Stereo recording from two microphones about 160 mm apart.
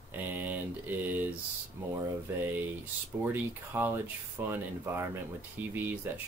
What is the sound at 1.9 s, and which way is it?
Speech, 10° right (ahead or behind).